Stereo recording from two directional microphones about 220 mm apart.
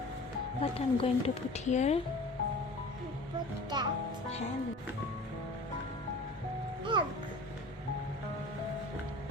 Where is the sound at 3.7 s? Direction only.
20° right (ahead or behind).